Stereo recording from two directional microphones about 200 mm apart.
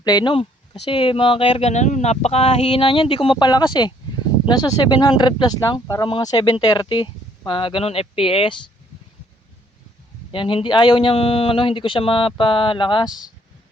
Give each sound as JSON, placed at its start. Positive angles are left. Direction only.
{"t": 0.0, "sound": "speech", "side_deg": 20}
{"t": 10.3, "sound": "speech", "side_deg": 25}
{"t": 13.1, "sound": "speech", "side_deg": 0}